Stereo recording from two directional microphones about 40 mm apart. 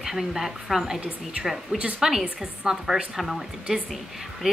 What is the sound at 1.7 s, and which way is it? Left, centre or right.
Speech, right.